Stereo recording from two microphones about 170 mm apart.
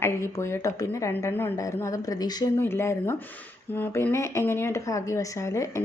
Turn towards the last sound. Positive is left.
turn(degrees=15)  # may be behind; listen again after turning